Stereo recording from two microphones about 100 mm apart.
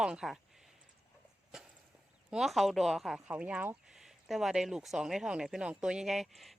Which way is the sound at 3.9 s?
5° right (ahead or behind).